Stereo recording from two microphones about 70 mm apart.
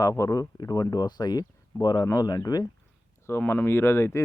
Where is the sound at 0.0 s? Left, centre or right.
Left.